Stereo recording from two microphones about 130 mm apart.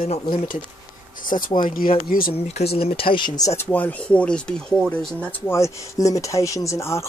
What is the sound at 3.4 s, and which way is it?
Speech, 20° left (ahead or behind).